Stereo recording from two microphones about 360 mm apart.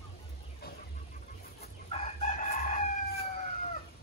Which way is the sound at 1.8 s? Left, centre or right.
Centre.